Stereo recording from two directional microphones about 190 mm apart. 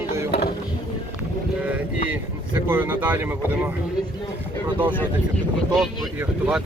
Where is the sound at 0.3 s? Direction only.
55° left (ahead or behind).